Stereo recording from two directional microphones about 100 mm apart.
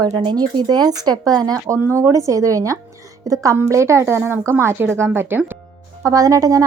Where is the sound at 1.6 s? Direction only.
25° right (ahead or behind).